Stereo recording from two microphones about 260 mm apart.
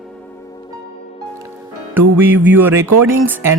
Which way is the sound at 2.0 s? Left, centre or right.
Centre.